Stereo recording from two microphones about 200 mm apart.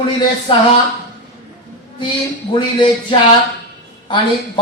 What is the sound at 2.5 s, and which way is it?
Speech, 25° left (ahead or behind).